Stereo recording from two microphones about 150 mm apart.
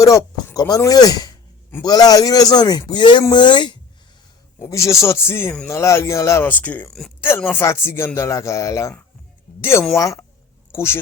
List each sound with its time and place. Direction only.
0.0 s a man's voice: 20° left (ahead or behind)
4.6 s a man's voice: 20° left (ahead or behind)